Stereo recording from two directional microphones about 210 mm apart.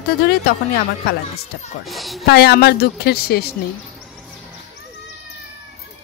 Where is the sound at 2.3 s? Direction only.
50° left (ahead or behind).